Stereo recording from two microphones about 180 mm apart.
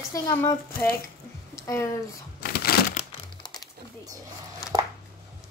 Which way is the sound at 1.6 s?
15° left (ahead or behind).